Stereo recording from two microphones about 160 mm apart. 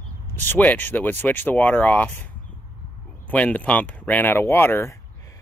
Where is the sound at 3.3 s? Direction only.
10° left (ahead or behind).